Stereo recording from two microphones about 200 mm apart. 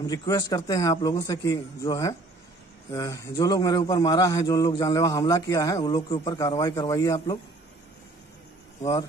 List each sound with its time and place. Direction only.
0.0 s a man's voice: 20° left (ahead or behind)